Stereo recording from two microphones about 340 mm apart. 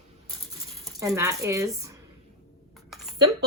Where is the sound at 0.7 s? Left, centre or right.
Centre.